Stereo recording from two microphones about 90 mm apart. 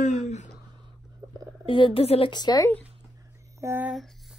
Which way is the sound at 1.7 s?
75° left (ahead or behind).